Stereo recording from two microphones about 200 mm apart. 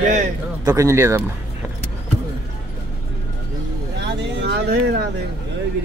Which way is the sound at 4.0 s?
60° right (ahead or behind).